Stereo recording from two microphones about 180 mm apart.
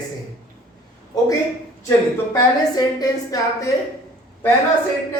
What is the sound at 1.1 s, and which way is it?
A woman's voice, 20° left (ahead or behind).